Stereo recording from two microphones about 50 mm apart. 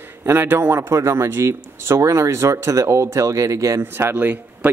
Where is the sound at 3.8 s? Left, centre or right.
Right.